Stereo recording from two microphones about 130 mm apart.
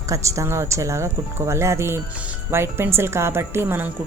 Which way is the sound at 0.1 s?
25° right (ahead or behind).